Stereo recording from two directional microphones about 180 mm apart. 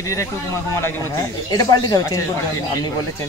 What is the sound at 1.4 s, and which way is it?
Speech, 20° left (ahead or behind).